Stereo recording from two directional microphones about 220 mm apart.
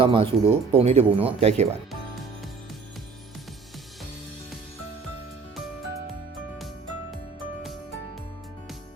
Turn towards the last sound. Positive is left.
turn(degrees=0)  # may be behind; listen again after turning